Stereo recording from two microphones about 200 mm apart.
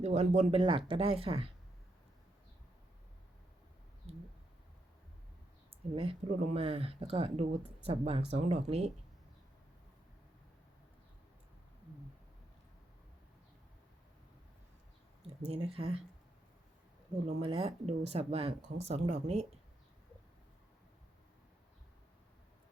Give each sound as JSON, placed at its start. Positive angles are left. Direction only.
{"t": 0.0, "sound": "speech", "side_deg": -35}
{"t": 4.1, "sound": "a sound", "side_deg": -30}
{"t": 6.0, "sound": "speech", "side_deg": -30}
{"t": 15.4, "sound": "speech", "side_deg": -30}
{"t": 17.2, "sound": "speech", "side_deg": -30}